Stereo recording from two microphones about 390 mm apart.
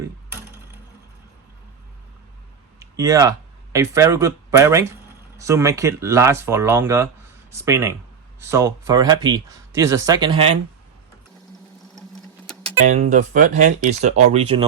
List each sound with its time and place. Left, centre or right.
2.7 s speech: centre
12.8 s speech: centre